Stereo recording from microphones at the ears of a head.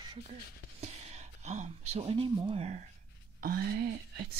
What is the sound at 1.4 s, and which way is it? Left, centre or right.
Speech, right.